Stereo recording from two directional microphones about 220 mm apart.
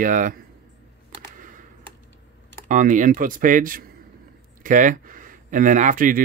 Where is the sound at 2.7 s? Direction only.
35° right (ahead or behind).